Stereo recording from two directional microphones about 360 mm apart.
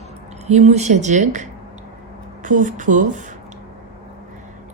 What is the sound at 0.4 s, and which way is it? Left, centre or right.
Speech, centre.